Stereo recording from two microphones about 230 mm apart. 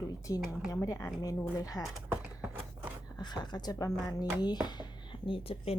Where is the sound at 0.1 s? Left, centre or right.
Centre.